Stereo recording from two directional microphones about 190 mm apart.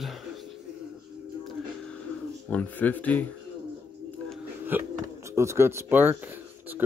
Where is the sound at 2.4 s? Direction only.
10° left (ahead or behind).